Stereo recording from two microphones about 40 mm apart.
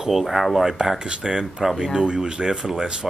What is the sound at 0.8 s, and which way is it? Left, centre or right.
Speech, centre.